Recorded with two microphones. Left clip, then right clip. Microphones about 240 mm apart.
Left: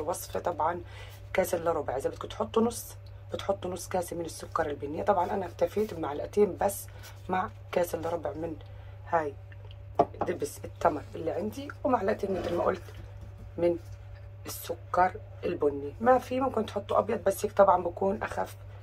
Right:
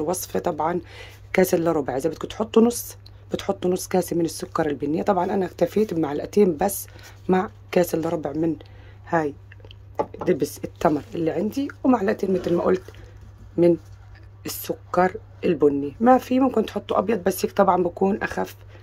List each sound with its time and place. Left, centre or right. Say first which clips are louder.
0.0 s speech: right 7 dB; right
9.0 s a sound: right 6 dB; right
10.2 s speech: right 9 dB; right
14.9 s speech: right 5 dB; right